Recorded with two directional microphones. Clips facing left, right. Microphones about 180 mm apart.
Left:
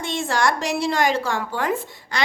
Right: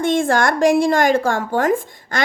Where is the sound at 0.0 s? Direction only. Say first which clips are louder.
Right 6 dB; 50° right (ahead or behind).